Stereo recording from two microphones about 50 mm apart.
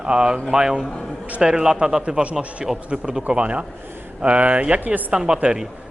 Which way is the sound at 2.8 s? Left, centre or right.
Right.